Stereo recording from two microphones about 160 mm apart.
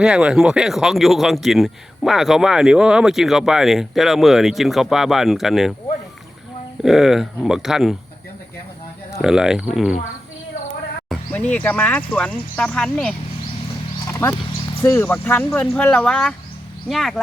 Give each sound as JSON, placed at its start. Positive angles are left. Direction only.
{"t": 0.0, "sound": "speech", "side_deg": -5}
{"t": 6.8, "sound": "speech", "side_deg": 0}
{"t": 9.2, "sound": "speech", "side_deg": -5}
{"t": 11.1, "sound": "speech", "side_deg": 10}
{"t": 14.1, "sound": "a sound", "side_deg": 15}
{"t": 14.8, "sound": "speech", "side_deg": 10}